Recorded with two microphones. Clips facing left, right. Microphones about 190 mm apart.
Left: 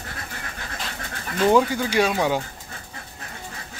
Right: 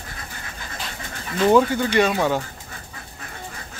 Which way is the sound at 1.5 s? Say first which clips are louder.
Right 4 dB; 10° left (ahead or behind).